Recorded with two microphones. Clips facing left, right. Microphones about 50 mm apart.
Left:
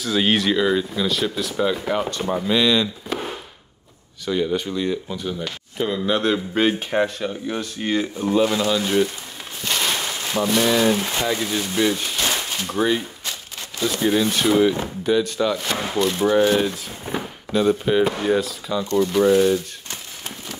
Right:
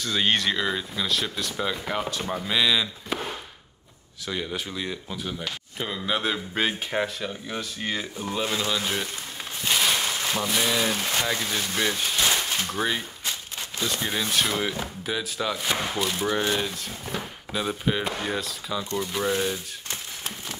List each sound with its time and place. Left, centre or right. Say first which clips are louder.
0.0 s speech: left 4 dB; centre
4.3 s speech: left 9 dB; centre
9.6 s a sound: left 1 dB; centre
10.4 s speech: left 8 dB; centre
10.9 s speech: left 5 dB; centre
12.7 s speech: left 6 dB; centre